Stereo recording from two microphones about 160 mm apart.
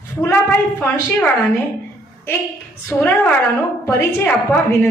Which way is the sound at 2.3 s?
15° left (ahead or behind).